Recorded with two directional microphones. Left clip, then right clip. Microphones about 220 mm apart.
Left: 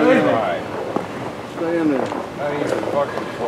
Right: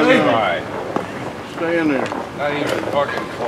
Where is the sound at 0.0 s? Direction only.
10° right (ahead or behind).